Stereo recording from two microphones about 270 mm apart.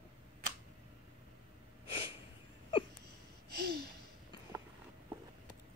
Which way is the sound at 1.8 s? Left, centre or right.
Centre.